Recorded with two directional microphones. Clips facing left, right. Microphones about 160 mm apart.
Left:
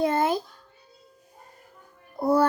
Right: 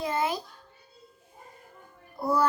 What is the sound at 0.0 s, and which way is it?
Cat, 55° left (ahead or behind).